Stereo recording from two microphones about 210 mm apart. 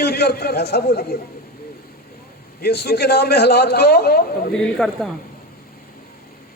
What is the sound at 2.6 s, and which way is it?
A man's voice, 50° left (ahead or behind).